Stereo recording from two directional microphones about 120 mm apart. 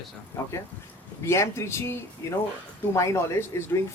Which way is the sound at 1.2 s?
25° left (ahead or behind).